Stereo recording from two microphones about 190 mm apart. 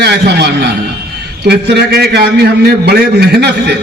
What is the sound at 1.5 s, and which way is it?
A man's voice, 60° right (ahead or behind).